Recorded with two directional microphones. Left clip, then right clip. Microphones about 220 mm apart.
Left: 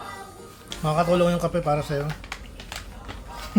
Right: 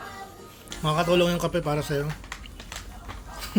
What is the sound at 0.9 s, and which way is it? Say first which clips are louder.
Speech: left 1 dB; 5° right (ahead or behind).